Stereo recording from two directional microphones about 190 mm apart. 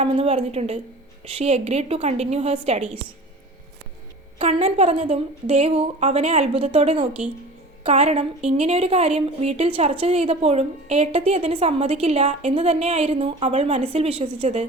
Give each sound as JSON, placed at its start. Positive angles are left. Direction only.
{"t": 0.0, "sound": "a woman's voice", "side_deg": -35}
{"t": 4.4, "sound": "a woman's voice", "side_deg": -35}